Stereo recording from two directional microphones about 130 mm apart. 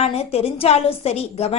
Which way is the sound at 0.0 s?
50° left (ahead or behind).